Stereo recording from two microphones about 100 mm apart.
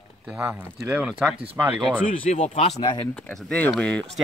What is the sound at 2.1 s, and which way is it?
Speech, 60° left (ahead or behind).